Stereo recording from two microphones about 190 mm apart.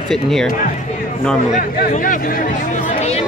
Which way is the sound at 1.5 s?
40° left (ahead or behind).